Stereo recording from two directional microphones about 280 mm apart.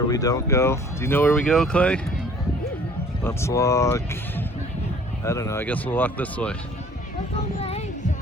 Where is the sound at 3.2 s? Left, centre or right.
Centre.